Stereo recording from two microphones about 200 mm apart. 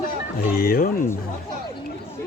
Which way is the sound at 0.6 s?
45° left (ahead or behind).